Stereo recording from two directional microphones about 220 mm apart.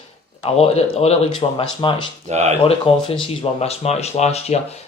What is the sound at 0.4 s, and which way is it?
Speech, 30° left (ahead or behind).